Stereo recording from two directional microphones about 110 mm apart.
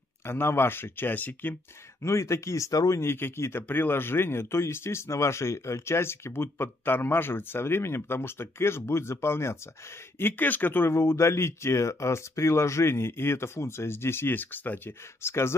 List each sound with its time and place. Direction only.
0.2 s speech: 20° left (ahead or behind)